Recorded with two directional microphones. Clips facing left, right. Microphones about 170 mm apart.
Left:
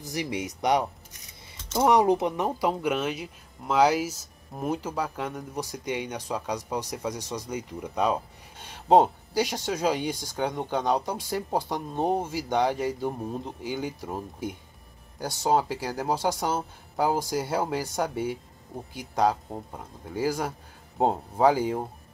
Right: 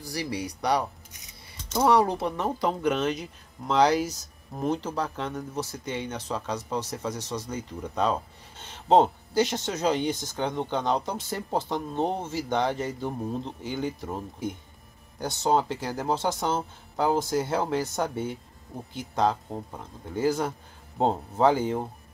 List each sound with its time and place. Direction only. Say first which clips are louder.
0.0 s speech: left 1 dB; 20° left (ahead or behind)